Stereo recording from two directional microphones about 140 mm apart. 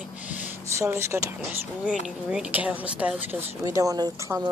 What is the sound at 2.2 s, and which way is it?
Speech, 10° right (ahead or behind).